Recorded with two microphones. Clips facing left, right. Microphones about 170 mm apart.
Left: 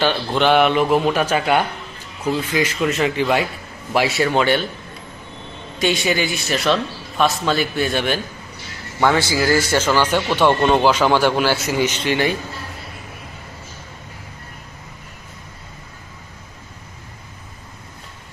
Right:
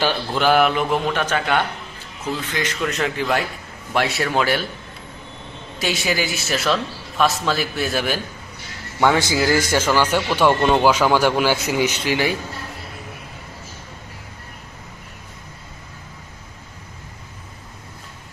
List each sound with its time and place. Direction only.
0.0 s a man's voice: 5° right (ahead or behind)
5.8 s a man's voice: centre (ahead or behind)
9.0 s speech: 15° right (ahead or behind)